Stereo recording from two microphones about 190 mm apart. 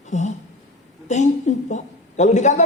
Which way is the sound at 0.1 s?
40° left (ahead or behind).